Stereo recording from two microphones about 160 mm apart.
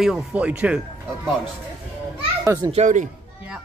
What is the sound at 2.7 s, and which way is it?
Speech, 50° right (ahead or behind).